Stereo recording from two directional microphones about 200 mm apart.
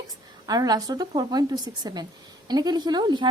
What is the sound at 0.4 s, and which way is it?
A woman's voice, 20° right (ahead or behind).